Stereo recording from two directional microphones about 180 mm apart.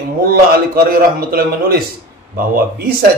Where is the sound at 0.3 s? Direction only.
55° right (ahead or behind).